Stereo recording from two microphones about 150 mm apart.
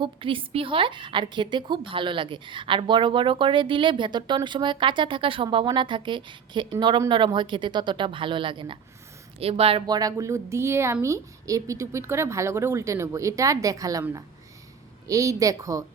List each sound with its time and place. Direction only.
0.0 s a woman's voice: 35° right (ahead or behind)
9.8 s a woman's voice: 25° right (ahead or behind)
15.0 s a woman's voice: 20° right (ahead or behind)